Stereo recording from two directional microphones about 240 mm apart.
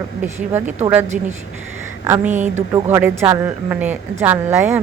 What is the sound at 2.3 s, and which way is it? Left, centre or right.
Speech, right.